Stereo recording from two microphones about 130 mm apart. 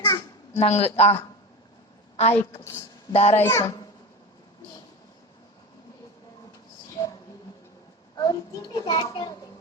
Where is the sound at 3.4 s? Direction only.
20° left (ahead or behind).